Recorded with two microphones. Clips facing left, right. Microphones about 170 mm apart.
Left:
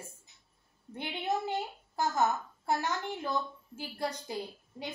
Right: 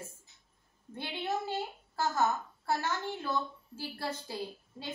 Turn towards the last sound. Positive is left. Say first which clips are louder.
# even
turn(degrees=15)  # may be behind; listen again after turning